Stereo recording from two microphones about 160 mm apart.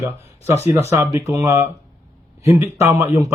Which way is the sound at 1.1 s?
20° right (ahead or behind).